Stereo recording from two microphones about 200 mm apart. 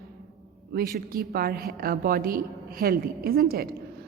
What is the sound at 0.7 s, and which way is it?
A woman's voice, 50° right (ahead or behind).